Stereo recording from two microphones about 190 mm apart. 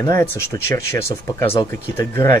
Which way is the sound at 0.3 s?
15° left (ahead or behind).